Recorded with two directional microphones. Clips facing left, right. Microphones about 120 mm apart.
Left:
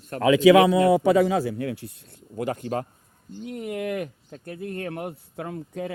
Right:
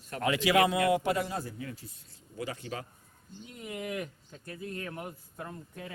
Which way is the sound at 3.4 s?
65° left (ahead or behind).